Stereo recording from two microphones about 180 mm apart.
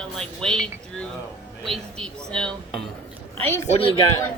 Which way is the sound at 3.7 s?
30° left (ahead or behind).